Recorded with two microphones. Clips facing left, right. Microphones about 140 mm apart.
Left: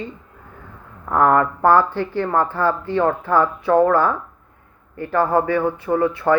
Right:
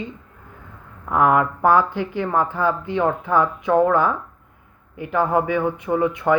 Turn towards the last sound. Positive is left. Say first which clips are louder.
# left 1 dB
turn(degrees=-15)  # may be behind; listen again after turning